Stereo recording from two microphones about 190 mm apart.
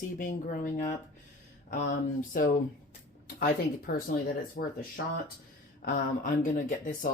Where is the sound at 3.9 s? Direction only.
50° left (ahead or behind).